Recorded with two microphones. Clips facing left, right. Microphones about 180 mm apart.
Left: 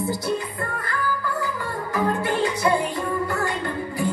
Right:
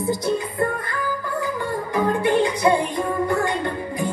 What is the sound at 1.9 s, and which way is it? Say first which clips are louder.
Music: right 4 dB; 20° right (ahead or behind).